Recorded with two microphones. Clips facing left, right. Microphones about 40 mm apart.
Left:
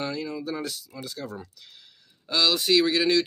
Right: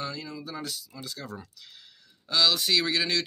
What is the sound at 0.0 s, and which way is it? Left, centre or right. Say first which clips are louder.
Speech: left 5 dB; left.